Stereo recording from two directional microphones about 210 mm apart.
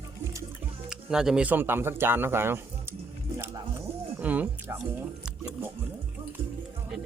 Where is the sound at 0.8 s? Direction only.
Centre (ahead or behind).